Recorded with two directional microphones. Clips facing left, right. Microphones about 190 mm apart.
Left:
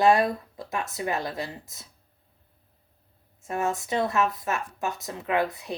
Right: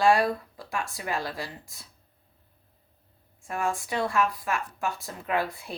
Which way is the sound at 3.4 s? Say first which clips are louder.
Left 2 dB; 25° left (ahead or behind).